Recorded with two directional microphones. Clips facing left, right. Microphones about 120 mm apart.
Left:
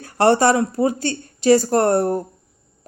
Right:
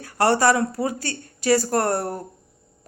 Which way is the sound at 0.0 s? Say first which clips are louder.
Left 4 dB; 25° left (ahead or behind).